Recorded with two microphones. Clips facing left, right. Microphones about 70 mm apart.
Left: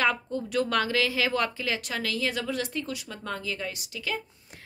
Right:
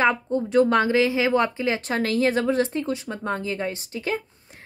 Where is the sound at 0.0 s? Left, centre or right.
Right.